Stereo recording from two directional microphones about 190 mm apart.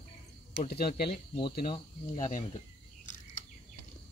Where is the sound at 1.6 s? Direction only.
40° left (ahead or behind).